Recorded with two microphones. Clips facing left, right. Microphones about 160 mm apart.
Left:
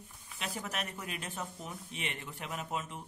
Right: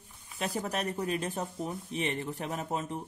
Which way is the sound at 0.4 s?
35° right (ahead or behind).